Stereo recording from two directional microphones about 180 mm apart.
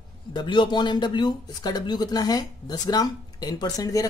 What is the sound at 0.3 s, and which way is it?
Speech, 25° left (ahead or behind).